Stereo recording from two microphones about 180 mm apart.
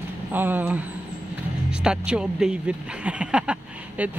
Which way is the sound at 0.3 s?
10° right (ahead or behind).